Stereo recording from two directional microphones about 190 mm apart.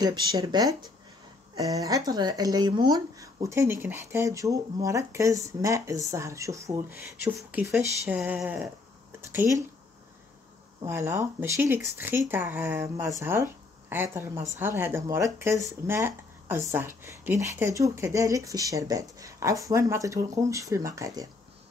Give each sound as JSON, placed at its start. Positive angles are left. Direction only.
{"t": 0.0, "sound": "speech", "side_deg": -20}
{"t": 10.8, "sound": "a woman's voice", "side_deg": -15}